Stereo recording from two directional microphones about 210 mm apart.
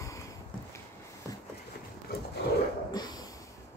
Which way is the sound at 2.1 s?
50° left (ahead or behind).